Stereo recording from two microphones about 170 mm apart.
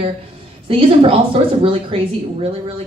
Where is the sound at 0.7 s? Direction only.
35° right (ahead or behind).